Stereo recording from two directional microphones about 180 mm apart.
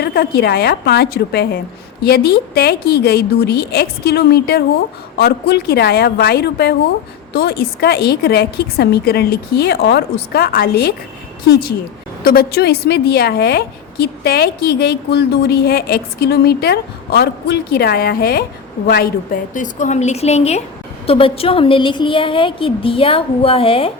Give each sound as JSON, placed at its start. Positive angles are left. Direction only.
{"t": 0.0, "sound": "a woman's voice", "side_deg": 60}
{"t": 12.2, "sound": "a woman's voice", "side_deg": 60}